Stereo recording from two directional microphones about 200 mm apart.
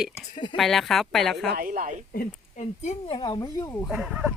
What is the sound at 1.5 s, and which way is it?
Speech, 45° right (ahead or behind).